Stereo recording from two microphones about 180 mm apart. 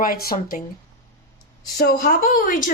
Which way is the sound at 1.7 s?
50° left (ahead or behind).